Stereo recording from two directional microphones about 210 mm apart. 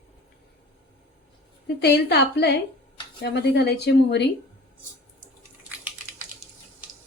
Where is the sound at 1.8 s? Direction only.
50° left (ahead or behind).